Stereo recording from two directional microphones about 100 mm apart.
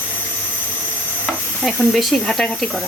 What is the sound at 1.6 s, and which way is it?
Speech, centre (ahead or behind).